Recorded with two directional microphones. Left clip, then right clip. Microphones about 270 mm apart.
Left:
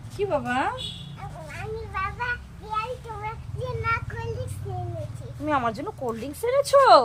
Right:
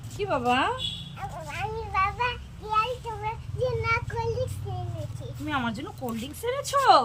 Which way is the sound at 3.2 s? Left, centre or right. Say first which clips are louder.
Right 4 dB; centre.